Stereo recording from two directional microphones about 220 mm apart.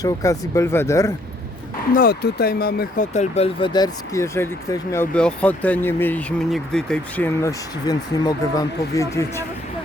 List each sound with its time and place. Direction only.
0.0 s speech: 15° left (ahead or behind)
2.0 s speech: 45° left (ahead or behind)
3.1 s speech: 30° left (ahead or behind); by 7.5 s 5° left (ahead or behind)
7.9 s speech: 15° left (ahead or behind)